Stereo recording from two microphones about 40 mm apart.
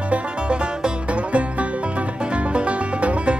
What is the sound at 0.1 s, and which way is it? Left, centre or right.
Music, right.